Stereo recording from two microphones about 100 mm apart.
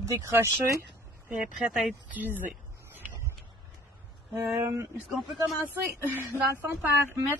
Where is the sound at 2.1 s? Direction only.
20° right (ahead or behind).